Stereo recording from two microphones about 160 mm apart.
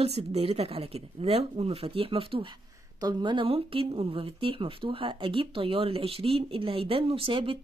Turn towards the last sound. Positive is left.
turn(degrees=-35)  # may be behind; listen again after turning